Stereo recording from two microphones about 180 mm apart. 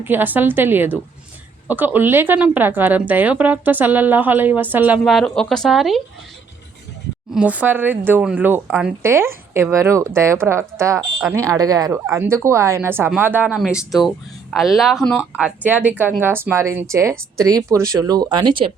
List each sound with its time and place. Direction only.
0.0 s a woman's voice: 10° right (ahead or behind)
5.0 s speech: centre (ahead or behind)
7.3 s a woman's voice: 5° right (ahead or behind)
15.4 s a woman's voice: 5° right (ahead or behind); by 18.7 s 25° right (ahead or behind)